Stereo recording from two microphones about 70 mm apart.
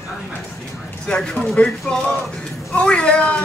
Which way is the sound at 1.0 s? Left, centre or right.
Centre.